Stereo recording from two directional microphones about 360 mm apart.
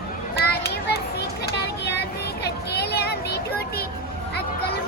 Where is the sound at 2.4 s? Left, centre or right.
Left.